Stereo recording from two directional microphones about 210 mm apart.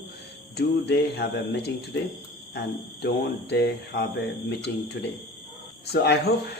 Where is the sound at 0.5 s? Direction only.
55° left (ahead or behind).